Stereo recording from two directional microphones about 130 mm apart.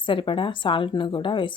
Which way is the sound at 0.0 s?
40° left (ahead or behind).